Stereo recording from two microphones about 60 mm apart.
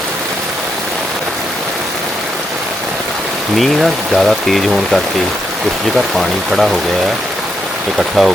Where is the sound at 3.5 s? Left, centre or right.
Centre.